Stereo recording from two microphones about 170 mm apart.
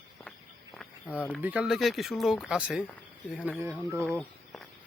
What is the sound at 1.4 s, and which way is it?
A man's voice, 10° right (ahead or behind).